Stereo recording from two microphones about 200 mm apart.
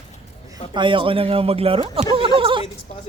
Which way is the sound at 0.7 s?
25° right (ahead or behind).